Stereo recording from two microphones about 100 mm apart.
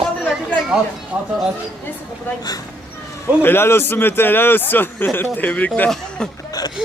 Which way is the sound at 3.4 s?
25° left (ahead or behind).